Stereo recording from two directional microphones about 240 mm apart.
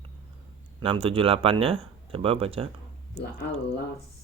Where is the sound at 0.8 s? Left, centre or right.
Right.